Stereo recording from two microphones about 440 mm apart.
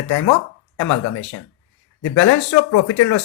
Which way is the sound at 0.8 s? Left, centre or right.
Left.